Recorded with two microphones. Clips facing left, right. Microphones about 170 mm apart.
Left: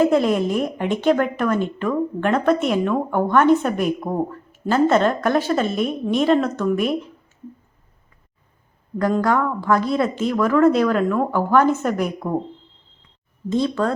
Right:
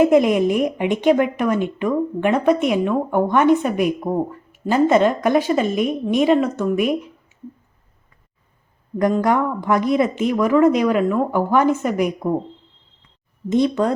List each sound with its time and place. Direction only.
0.0 s a woman's voice: 15° right (ahead or behind)
6.7 s a sound: 15° right (ahead or behind)
9.2 s a woman's voice: 20° right (ahead or behind)
13.5 s speech: 20° right (ahead or behind)